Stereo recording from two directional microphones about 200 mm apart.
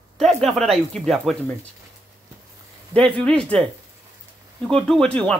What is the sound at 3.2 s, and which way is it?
Speech, 5° left (ahead or behind).